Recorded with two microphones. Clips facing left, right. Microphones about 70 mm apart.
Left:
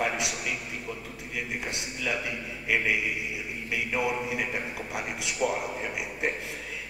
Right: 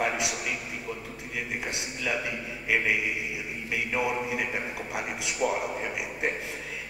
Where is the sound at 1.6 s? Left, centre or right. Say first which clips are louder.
Even; centre.